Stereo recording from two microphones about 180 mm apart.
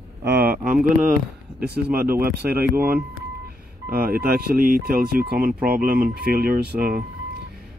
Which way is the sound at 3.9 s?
55° right (ahead or behind).